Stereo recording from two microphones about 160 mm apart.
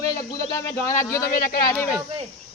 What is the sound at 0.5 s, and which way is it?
Speech, 20° left (ahead or behind).